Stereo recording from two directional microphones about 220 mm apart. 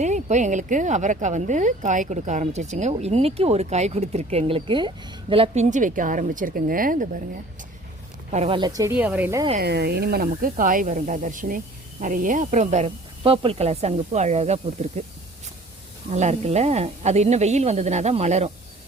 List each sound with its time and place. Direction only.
0.0 s speech: 30° right (ahead or behind)
8.3 s speech: 25° right (ahead or behind); by 9.5 s 10° right (ahead or behind)
9.6 s speech: 45° right (ahead or behind); by 15.0 s 30° right (ahead or behind)
16.1 s speech: 30° right (ahead or behind)